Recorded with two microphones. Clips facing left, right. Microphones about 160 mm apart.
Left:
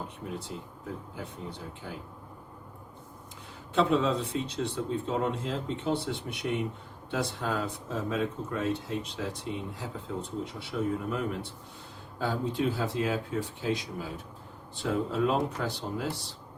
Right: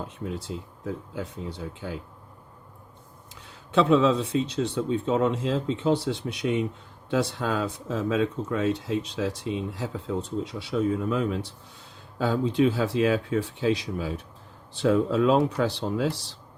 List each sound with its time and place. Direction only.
1.1 s speech: 90° right
3.8 s speech: 90° right